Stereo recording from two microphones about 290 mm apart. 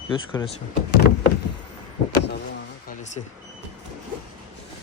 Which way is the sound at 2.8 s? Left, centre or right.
Left.